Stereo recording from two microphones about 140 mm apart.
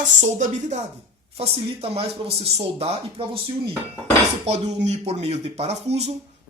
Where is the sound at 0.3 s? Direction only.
60° right (ahead or behind).